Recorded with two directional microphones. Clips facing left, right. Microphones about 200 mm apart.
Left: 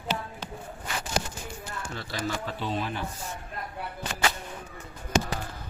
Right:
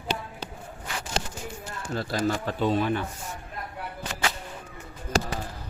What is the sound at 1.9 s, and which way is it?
Speech, 40° right (ahead or behind).